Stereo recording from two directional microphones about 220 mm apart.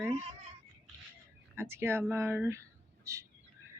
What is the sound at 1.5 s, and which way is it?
Speech, 10° right (ahead or behind).